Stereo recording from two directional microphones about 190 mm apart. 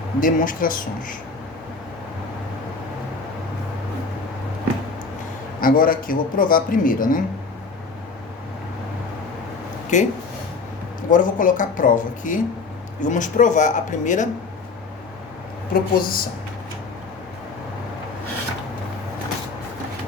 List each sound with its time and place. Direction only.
0.2 s speech: 45° left (ahead or behind)
5.5 s speech: 45° left (ahead or behind)
9.9 s speech: 40° left (ahead or behind)
11.1 s speech: 45° left (ahead or behind)
15.7 s speech: 50° left (ahead or behind)